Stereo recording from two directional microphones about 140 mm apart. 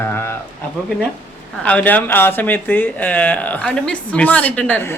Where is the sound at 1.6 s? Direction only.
10° left (ahead or behind).